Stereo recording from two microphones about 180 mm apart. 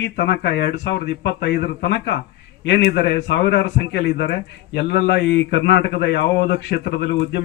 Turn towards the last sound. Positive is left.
turn(degrees=75)  # may be behind; listen again after turning